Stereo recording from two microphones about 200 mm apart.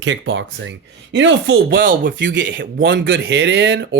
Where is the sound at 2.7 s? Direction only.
50° right (ahead or behind).